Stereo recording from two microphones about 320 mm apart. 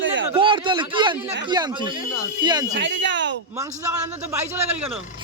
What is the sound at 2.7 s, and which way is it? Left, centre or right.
Speech, right.